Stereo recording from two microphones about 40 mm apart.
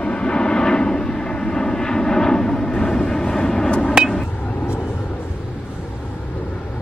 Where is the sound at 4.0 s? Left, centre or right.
Right.